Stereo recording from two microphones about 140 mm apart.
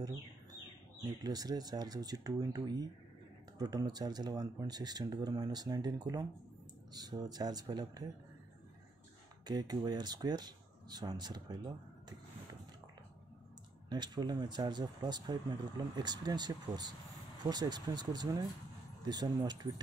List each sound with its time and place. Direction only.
1.0 s speech: 30° right (ahead or behind)
9.5 s speech: 30° right (ahead or behind)
13.8 s speech: 30° right (ahead or behind)